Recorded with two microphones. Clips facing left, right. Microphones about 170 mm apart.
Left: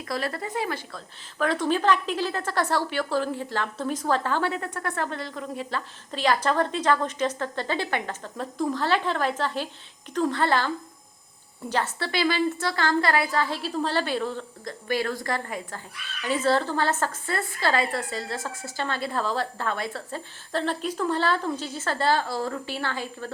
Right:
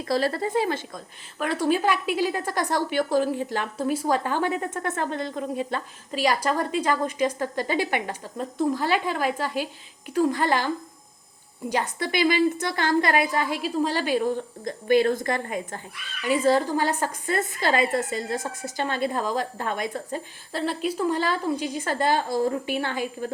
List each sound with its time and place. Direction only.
0.0 s speech: 30° right (ahead or behind)
0.9 s a woman's voice: 10° right (ahead or behind)
6.1 s a woman's voice: 10° right (ahead or behind)
11.7 s a woman's voice: 15° right (ahead or behind)